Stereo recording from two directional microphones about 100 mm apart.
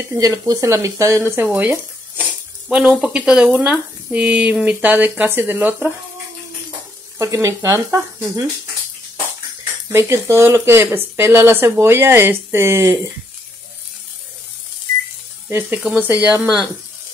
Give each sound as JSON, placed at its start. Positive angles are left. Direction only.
{"t": 0.2, "sound": "speech", "side_deg": -35}
{"t": 7.2, "sound": "speech", "side_deg": -30}
{"t": 9.9, "sound": "speech", "side_deg": -25}
{"t": 15.4, "sound": "speech", "side_deg": -20}